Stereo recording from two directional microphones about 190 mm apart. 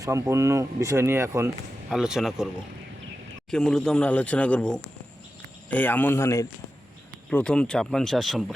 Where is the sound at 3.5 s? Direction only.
5° left (ahead or behind).